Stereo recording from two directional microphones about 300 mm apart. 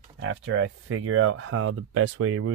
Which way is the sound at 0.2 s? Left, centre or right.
Right.